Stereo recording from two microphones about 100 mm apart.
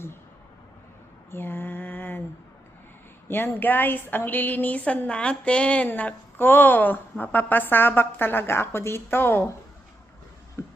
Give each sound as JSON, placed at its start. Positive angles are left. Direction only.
{"t": 1.3, "sound": "mantra", "side_deg": 20}
{"t": 3.2, "sound": "a woman's voice", "side_deg": 20}
{"t": 10.6, "sound": "music", "side_deg": 25}